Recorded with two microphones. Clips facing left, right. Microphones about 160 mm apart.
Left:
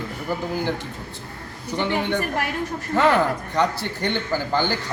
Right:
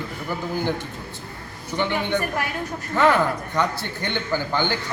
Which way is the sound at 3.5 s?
35° left (ahead or behind).